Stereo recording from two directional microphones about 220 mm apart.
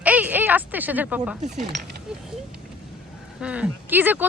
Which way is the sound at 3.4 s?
5° right (ahead or behind).